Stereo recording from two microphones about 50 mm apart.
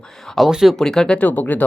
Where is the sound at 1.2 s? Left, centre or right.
Left.